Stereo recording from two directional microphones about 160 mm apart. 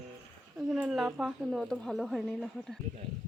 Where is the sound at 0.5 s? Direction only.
Centre (ahead or behind).